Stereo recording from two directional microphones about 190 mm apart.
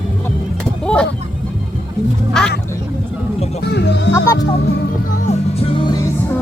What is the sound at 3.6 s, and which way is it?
Music, 65° left (ahead or behind).